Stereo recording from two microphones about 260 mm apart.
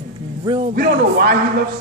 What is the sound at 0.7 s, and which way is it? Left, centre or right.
Speech, right.